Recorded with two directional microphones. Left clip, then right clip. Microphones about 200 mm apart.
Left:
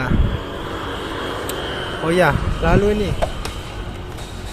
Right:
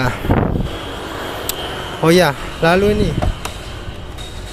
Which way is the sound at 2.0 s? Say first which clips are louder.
Right 4 dB; 60° right (ahead or behind).